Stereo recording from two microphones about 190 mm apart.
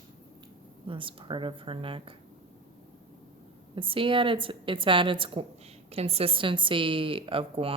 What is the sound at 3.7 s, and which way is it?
Speech, 25° right (ahead or behind).